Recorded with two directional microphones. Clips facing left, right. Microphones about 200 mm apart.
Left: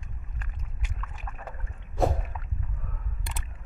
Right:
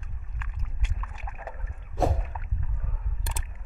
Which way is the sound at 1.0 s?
5° right (ahead or behind).